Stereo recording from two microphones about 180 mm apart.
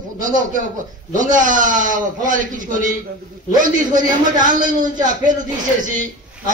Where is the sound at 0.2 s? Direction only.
45° right (ahead or behind).